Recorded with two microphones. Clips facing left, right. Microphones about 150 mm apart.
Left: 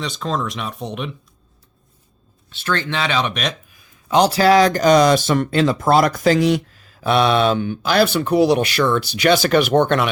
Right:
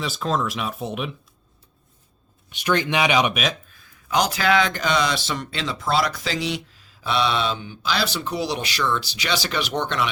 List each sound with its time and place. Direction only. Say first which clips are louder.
0.0 s speech: left 1 dB; 5° right (ahead or behind)
2.5 s speech: right 1 dB; 15° right (ahead or behind)
3.7 s a sound: left 1 dB; 15° left (ahead or behind)
4.1 s speech: left 7 dB; 35° left (ahead or behind); by 10.1 s 55° left (ahead or behind)